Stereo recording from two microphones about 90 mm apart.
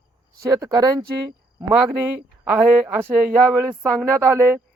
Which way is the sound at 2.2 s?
20° right (ahead or behind).